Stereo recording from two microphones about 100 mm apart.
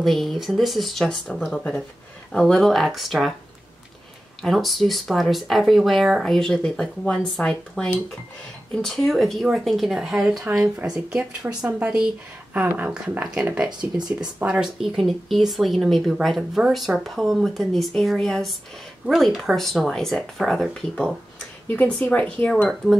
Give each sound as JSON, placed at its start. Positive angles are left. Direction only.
{"t": 0.0, "sound": "speech", "side_deg": 0}
{"t": 4.4, "sound": "speech", "side_deg": 0}
{"t": 13.7, "sound": "speech", "side_deg": -45}
{"t": 14.4, "sound": "speech", "side_deg": -10}
{"t": 21.6, "sound": "speech", "side_deg": 15}